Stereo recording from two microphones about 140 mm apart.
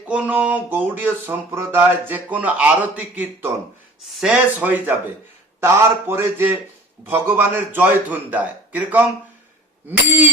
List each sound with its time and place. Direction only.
0.1 s speech: 10° right (ahead or behind)